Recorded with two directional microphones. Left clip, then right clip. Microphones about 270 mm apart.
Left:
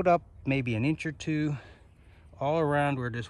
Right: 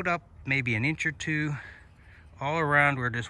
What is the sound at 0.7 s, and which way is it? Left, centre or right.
Speech, centre.